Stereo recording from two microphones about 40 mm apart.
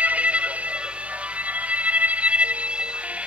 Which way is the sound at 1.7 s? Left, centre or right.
Right.